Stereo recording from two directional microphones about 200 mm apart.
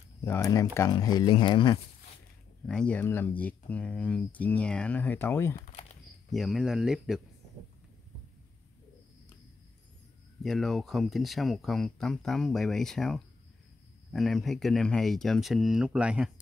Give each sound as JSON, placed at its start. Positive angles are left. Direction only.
{"t": 0.2, "sound": "speech", "side_deg": 15}
{"t": 2.6, "sound": "speech", "side_deg": 5}
{"t": 5.6, "sound": "a sound", "side_deg": 35}
{"t": 6.3, "sound": "speech", "side_deg": 0}
{"t": 10.4, "sound": "speech", "side_deg": 0}